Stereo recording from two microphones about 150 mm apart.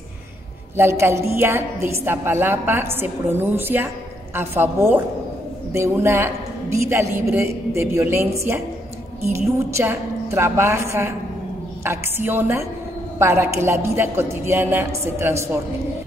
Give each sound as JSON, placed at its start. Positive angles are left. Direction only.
{"t": 0.7, "sound": "a woman's voice", "side_deg": -15}